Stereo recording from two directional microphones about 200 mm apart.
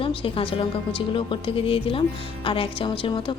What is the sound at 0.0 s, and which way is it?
A woman's voice, 25° left (ahead or behind).